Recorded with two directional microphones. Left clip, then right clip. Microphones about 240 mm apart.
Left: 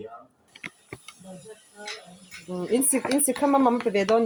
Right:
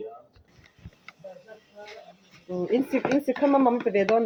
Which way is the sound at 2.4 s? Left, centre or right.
Left.